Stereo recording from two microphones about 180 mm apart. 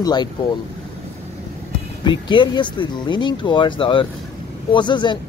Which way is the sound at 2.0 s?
25° left (ahead or behind).